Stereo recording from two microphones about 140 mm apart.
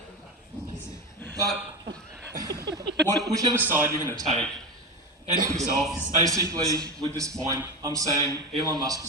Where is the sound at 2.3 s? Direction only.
25° right (ahead or behind).